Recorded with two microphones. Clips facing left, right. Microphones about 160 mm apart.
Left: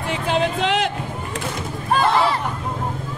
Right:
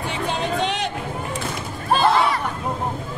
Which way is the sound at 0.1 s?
90° left.